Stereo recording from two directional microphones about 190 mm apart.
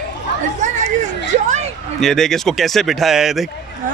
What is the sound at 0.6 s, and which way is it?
Chatter, 40° right (ahead or behind).